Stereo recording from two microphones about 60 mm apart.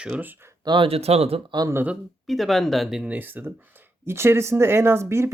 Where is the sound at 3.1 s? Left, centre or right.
Right.